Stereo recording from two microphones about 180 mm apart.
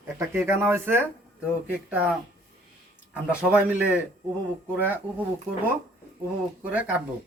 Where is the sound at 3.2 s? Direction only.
5° right (ahead or behind).